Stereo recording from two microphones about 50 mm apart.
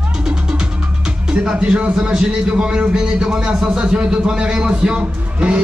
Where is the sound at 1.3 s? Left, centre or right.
Centre.